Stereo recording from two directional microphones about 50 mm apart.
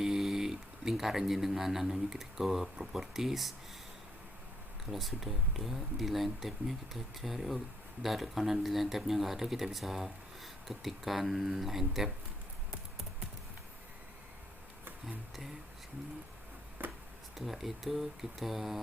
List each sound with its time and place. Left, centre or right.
0.0 s speech: centre
4.9 s speech: centre
16.8 s a sound: right
17.3 s speech: centre